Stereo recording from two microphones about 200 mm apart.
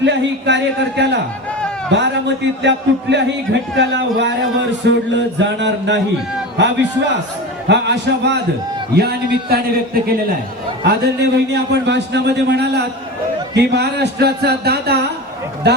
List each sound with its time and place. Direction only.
0.0 s a man's voice: 60° right (ahead or behind)
7.7 s a man's voice: 60° right (ahead or behind)